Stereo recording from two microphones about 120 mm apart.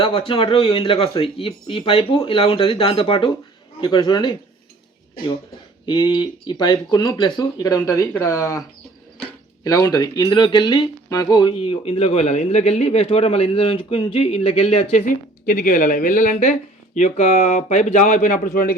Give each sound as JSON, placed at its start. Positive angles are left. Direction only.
{"t": 0.0, "sound": "speech", "side_deg": 50}
{"t": 5.8, "sound": "speech", "side_deg": 40}
{"t": 9.6, "sound": "speech", "side_deg": 30}
{"t": 15.5, "sound": "speech", "side_deg": 90}